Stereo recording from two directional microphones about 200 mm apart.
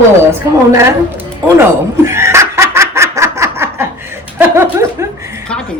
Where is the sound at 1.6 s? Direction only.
15° right (ahead or behind).